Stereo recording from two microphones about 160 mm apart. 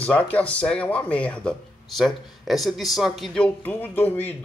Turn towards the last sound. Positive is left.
turn(degrees=10)  # may be behind; listen again after turning